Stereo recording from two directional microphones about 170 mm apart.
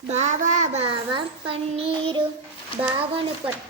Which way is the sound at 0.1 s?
45° right (ahead or behind).